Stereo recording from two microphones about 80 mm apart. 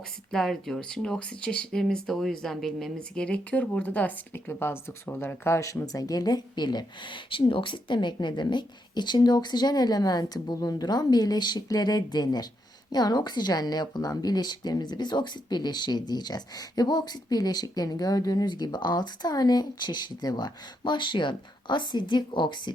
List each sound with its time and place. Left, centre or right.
0.3 s a woman's voice: centre; by 22.7 s left